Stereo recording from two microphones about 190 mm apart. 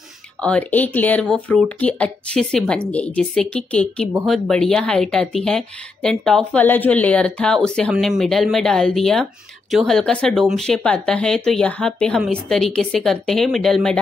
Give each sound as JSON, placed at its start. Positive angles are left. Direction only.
{"t": 0.4, "sound": "a woman's voice", "side_deg": 5}